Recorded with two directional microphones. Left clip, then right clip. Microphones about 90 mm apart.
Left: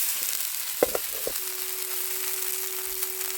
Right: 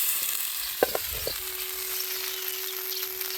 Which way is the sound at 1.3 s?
65° left (ahead or behind).